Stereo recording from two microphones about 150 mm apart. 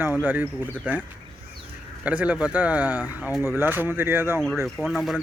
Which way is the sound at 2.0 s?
10° right (ahead or behind).